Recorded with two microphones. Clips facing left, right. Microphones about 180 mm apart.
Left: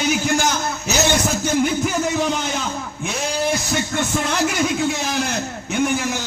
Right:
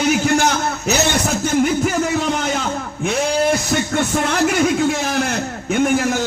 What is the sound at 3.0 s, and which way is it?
A man's voice, 55° right (ahead or behind).